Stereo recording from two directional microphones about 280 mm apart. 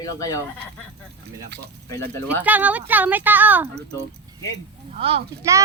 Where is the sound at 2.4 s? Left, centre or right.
Centre.